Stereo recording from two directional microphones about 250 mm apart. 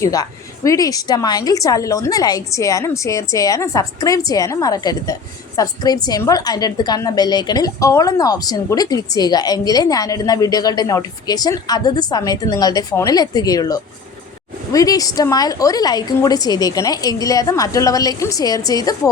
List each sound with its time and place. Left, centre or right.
0.0 s a woman's voice: centre